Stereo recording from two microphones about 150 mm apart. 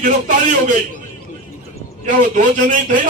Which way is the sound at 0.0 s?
60° right (ahead or behind).